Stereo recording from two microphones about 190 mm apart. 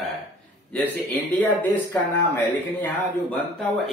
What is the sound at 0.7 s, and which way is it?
Speech, 10° left (ahead or behind).